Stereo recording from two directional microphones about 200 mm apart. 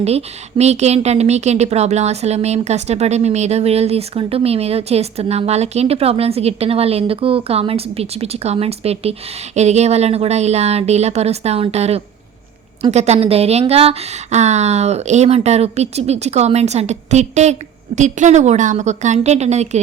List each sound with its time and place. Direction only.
0.0 s speech: 30° right (ahead or behind)